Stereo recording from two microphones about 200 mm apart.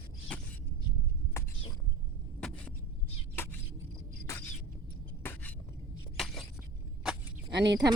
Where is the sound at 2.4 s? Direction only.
5° left (ahead or behind).